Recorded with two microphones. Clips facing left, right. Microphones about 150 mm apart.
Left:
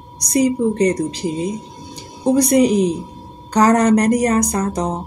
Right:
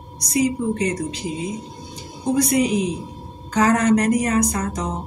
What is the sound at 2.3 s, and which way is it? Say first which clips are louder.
A woman's voice: left 5 dB; 35° left (ahead or behind).